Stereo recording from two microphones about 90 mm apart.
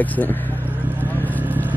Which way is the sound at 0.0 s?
15° left (ahead or behind).